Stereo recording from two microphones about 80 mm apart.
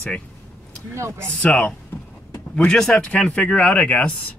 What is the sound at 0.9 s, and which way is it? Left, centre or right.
Speech, right.